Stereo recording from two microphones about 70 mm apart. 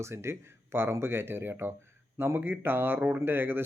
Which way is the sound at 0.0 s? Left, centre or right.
Right.